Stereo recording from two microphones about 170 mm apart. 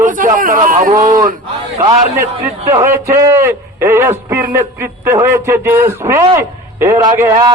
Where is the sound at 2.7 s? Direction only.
15° right (ahead or behind).